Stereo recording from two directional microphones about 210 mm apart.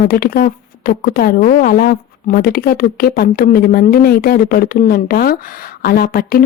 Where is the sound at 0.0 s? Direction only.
45° left (ahead or behind).